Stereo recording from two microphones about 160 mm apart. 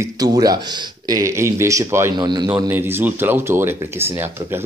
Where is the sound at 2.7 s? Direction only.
15° right (ahead or behind).